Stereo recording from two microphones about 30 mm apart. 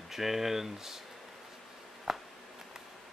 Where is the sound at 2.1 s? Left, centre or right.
Centre.